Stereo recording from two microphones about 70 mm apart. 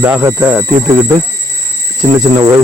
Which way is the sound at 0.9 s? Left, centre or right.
Right.